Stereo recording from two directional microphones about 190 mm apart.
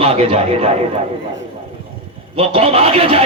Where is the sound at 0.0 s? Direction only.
30° right (ahead or behind).